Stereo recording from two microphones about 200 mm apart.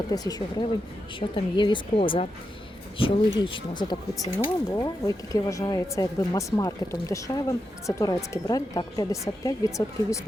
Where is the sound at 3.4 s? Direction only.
25° left (ahead or behind).